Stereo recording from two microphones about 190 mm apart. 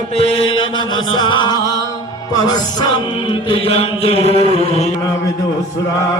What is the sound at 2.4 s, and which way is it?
Music, 20° left (ahead or behind).